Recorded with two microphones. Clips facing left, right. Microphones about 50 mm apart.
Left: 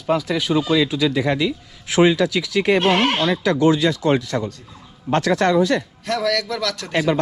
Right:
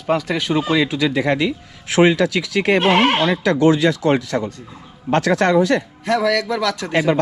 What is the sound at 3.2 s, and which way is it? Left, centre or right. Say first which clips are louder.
Speech: right 2 dB; right.